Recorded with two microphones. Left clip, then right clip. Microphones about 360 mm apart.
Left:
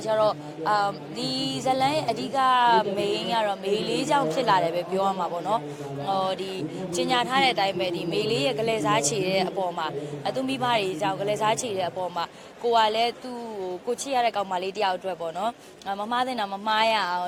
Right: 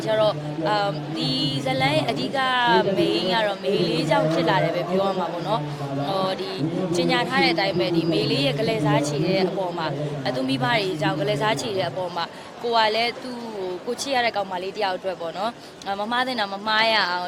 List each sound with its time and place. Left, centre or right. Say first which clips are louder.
0.1 s speech: right 2 dB; left
6.9 s speech: right 1 dB; left